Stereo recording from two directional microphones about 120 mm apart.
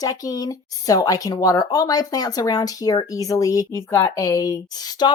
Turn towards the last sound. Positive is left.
turn(degrees=35)  # may be behind; listen again after turning